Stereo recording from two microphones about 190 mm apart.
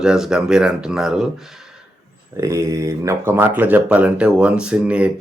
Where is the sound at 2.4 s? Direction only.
15° right (ahead or behind).